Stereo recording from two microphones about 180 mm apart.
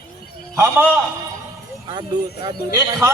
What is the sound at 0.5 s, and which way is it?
Speech, 15° right (ahead or behind).